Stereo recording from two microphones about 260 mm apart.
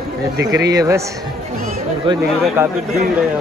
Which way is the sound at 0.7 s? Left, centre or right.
Centre.